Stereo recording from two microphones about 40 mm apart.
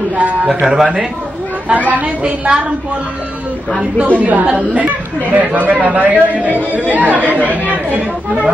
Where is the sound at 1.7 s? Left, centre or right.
Right.